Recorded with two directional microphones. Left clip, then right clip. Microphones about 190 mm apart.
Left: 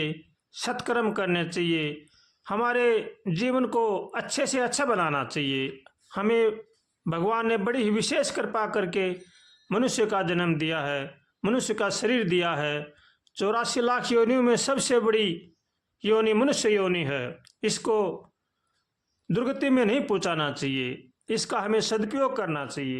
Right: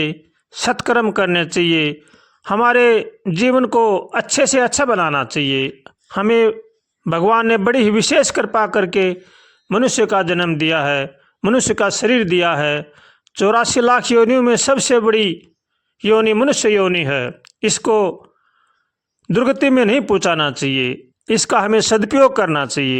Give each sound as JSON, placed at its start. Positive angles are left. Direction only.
{"t": 0.0, "sound": "a man's voice", "side_deg": -40}
{"t": 19.3, "sound": "a man's voice", "side_deg": -40}